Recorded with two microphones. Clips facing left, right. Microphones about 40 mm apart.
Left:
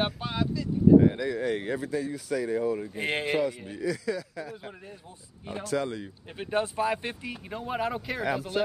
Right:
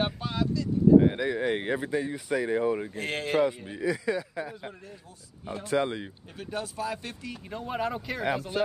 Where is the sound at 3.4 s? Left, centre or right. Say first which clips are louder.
Right 2 dB; centre.